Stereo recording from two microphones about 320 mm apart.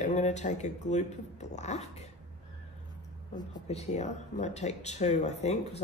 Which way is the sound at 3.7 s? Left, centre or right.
Left.